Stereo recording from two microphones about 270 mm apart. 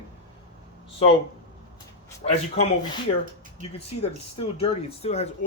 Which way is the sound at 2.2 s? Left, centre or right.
Left.